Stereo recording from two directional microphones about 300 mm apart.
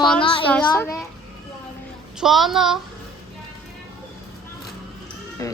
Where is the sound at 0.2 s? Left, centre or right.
Centre.